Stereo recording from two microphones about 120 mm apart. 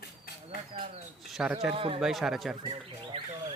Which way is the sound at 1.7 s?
50° right (ahead or behind).